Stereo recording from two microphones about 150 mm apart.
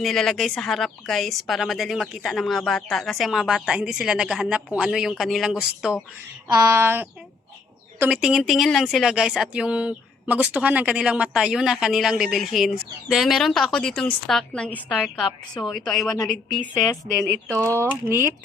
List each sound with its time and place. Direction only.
0.0 s a woman's voice: centre (ahead or behind)
6.5 s a sound: 20° right (ahead or behind)
7.9 s speech: 15° right (ahead or behind)
8.2 s a woman's voice: centre (ahead or behind)
17.5 s speech: 20° right (ahead or behind)
17.8 s a sound: 15° right (ahead or behind)